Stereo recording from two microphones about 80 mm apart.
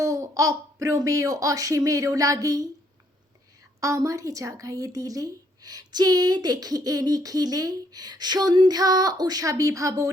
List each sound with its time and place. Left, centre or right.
0.0 s speech: right
3.8 s speech: right